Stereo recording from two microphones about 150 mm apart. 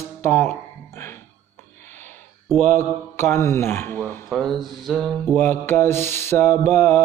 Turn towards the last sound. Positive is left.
turn(degrees=15)  # may be behind; listen again after turning